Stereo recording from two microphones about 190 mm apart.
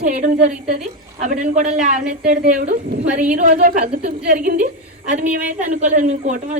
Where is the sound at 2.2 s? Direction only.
60° right (ahead or behind).